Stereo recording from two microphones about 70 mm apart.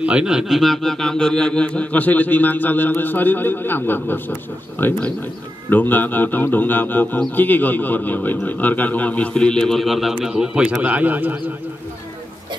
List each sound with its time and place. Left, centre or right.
0.0 s a man's voice: centre
10.8 s speech: right